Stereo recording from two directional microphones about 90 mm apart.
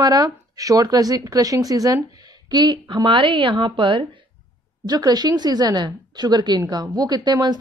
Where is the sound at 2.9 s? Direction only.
60° right (ahead or behind).